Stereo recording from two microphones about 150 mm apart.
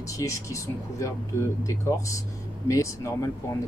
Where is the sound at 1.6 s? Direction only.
20° left (ahead or behind).